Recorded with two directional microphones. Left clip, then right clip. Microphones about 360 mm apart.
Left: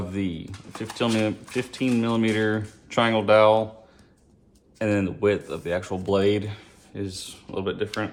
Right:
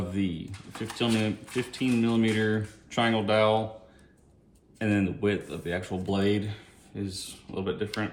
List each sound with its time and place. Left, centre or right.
0.1 s speech: centre
4.8 s speech: centre